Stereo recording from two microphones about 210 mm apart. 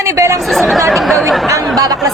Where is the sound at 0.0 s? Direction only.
15° right (ahead or behind).